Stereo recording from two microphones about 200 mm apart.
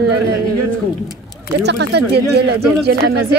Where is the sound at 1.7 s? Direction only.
55° right (ahead or behind).